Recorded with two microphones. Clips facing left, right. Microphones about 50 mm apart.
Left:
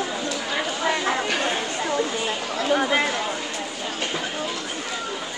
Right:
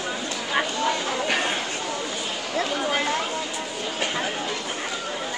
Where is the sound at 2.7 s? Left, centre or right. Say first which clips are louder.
Left 8 dB; left.